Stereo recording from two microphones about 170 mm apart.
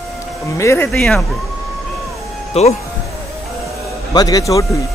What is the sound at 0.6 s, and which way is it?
Speech, 15° left (ahead or behind).